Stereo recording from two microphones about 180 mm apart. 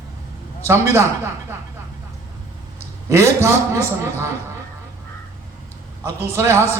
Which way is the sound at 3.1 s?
15° right (ahead or behind).